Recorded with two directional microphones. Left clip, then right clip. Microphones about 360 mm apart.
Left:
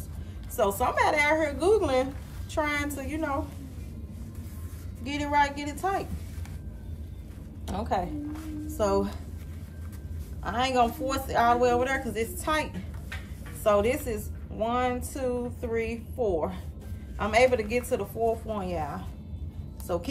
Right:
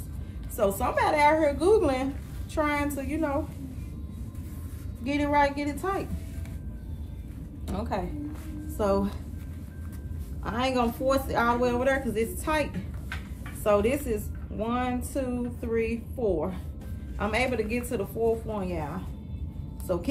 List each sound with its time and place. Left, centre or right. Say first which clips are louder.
0.6 s speech: left 1 dB; centre
5.0 s speech: right 1 dB; centre
7.6 s a woman's voice: left 3 dB; centre
10.4 s speech: left 2 dB; centre
13.7 s speech: even; centre
19.9 s speech: right 1 dB; centre